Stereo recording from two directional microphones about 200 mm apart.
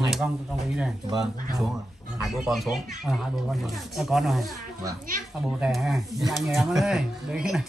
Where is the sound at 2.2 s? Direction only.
Centre (ahead or behind).